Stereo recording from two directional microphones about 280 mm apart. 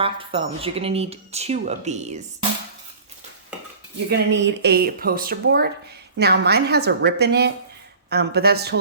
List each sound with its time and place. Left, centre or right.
0.0 s speech: centre
4.1 s speech: right